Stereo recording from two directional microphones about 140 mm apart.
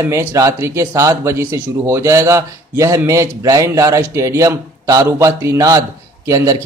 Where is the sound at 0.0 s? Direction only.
20° right (ahead or behind).